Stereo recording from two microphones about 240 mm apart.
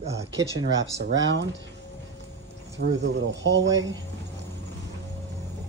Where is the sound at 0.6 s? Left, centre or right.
Right.